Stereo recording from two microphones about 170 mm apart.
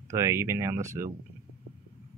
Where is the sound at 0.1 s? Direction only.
15° right (ahead or behind).